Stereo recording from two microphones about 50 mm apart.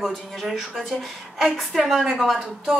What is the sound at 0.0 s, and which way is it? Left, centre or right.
A woman's voice, centre.